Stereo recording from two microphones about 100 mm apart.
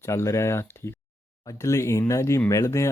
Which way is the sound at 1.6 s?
30° left (ahead or behind).